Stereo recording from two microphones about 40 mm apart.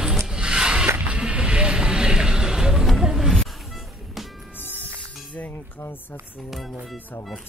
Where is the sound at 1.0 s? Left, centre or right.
Right; by 2.9 s centre.